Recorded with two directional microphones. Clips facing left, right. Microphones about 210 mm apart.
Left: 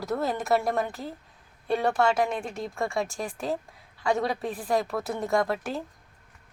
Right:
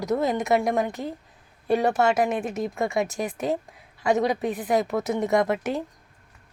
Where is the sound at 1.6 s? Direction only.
5° right (ahead or behind).